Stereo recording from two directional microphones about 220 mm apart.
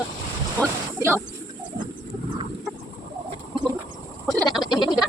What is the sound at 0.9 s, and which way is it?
Speech, 10° right (ahead or behind).